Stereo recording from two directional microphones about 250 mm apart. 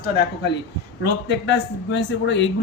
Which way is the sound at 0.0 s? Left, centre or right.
Left.